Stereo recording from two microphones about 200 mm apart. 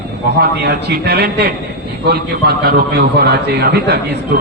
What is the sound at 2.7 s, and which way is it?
A man's voice, 55° right (ahead or behind).